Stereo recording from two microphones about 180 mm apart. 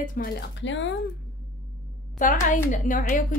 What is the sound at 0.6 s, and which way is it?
Speech, 90° left.